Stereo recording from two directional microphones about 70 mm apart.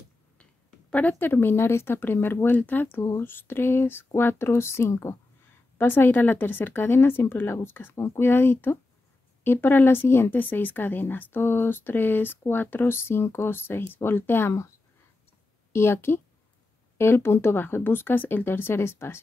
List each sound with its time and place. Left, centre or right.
0.4 s a sound: centre
1.1 s speech: left
15.7 s speech: left